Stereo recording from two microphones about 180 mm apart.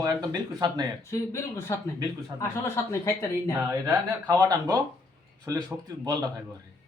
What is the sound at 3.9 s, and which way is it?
Speech, 15° right (ahead or behind).